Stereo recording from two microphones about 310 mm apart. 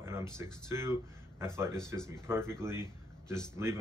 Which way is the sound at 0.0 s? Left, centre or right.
Centre.